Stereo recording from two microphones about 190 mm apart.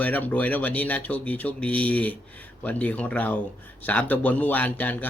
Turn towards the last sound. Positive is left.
turn(degrees=10)  # may be behind; listen again after turning